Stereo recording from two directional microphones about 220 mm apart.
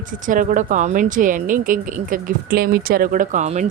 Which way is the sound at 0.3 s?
35° right (ahead or behind).